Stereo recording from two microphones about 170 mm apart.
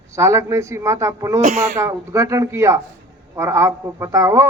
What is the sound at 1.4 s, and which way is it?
Speech, 45° right (ahead or behind).